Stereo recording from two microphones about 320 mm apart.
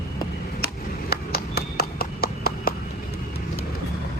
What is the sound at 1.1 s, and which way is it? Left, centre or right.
Clip-clop, left.